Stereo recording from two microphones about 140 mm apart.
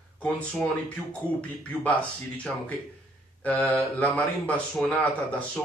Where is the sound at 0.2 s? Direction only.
5° left (ahead or behind).